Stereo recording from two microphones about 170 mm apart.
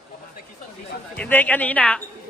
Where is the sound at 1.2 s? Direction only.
10° left (ahead or behind).